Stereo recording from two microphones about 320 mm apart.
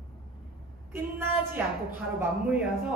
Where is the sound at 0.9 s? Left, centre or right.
Centre.